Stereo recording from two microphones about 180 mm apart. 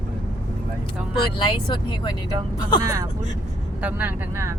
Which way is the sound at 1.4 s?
25° left (ahead or behind).